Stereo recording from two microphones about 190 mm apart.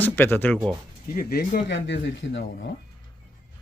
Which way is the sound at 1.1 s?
50° left (ahead or behind).